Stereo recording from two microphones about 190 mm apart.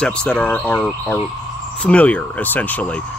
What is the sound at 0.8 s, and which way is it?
Speech, 15° left (ahead or behind).